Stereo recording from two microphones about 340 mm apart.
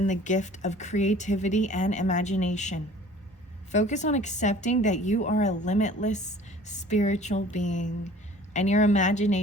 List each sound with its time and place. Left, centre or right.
0.0 s speech: left